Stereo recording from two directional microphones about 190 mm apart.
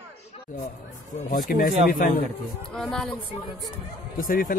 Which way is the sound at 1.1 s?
45° left (ahead or behind).